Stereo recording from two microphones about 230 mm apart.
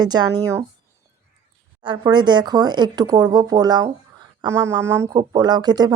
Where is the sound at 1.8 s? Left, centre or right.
Right.